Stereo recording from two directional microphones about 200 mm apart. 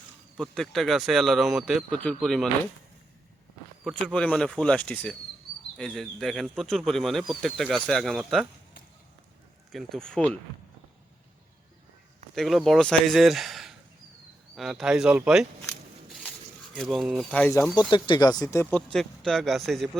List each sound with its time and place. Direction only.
0.5 s speech: centre (ahead or behind)
4.0 s speech: 5° left (ahead or behind)
9.7 s speech: centre (ahead or behind)
12.3 s speech: centre (ahead or behind)
16.7 s speech: centre (ahead or behind)
17.9 s speech: 25° left (ahead or behind)
18.7 s speech: centre (ahead or behind)